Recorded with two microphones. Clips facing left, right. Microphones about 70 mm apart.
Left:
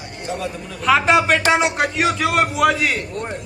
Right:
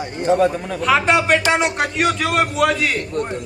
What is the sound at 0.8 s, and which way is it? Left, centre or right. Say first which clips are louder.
A man's voice: left 1 dB; centre.